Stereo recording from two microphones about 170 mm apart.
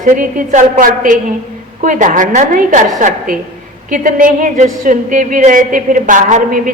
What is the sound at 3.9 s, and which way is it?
A woman's voice, 55° right (ahead or behind).